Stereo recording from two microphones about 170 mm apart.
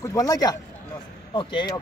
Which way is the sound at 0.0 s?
20° left (ahead or behind).